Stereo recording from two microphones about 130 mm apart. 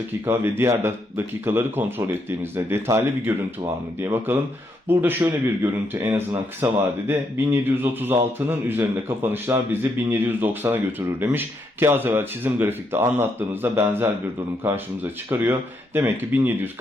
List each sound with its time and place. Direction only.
0.3 s speech: 20° right (ahead or behind)